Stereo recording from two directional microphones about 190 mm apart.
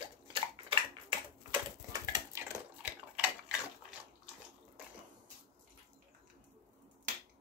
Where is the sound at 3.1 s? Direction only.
5° right (ahead or behind).